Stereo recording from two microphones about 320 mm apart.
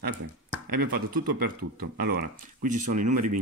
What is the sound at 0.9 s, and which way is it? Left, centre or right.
Speech, right.